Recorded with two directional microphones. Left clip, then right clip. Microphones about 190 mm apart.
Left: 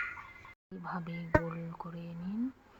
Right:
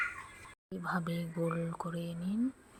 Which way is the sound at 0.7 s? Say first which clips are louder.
Right 5 dB; 15° right (ahead or behind).